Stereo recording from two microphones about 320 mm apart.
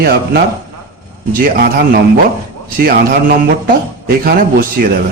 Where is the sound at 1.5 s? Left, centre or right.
Right.